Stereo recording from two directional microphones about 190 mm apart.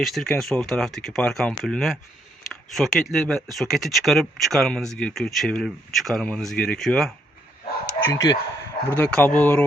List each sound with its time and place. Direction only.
0.0 s speech: centre (ahead or behind)
8.0 s speech: 15° left (ahead or behind)
9.0 s speech: 5° left (ahead or behind)